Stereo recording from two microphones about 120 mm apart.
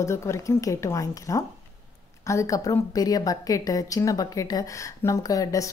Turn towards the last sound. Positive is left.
turn(degrees=30)  # may be behind; listen again after turning